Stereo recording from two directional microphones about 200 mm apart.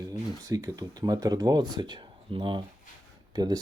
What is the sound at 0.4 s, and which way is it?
Speech, 20° right (ahead or behind).